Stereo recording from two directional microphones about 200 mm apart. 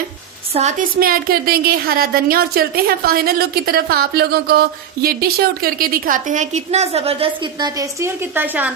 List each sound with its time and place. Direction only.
0.5 s a woman's voice: 35° right (ahead or behind)
7.8 s a woman's voice: 10° right (ahead or behind)